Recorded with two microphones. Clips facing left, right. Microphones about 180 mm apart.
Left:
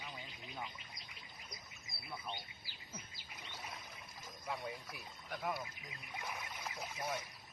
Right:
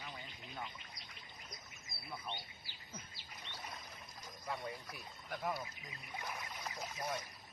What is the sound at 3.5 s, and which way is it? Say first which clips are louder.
Boat: even; 10° left (ahead or behind).